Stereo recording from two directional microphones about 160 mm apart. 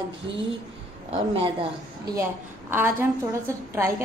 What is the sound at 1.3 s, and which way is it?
Speech, 35° right (ahead or behind).